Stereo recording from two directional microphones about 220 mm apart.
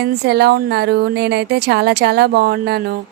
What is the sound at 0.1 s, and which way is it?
A woman's voice, 45° right (ahead or behind).